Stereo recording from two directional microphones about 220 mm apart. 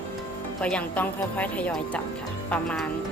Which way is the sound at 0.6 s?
5° left (ahead or behind).